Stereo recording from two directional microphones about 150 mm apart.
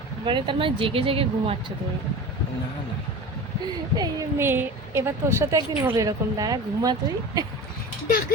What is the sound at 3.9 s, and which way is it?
Speech, 25° right (ahead or behind).